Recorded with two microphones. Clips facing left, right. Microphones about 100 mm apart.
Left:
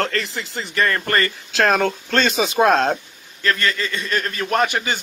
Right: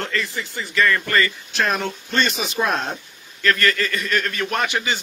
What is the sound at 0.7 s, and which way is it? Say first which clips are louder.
Speech: even; 45° left (ahead or behind).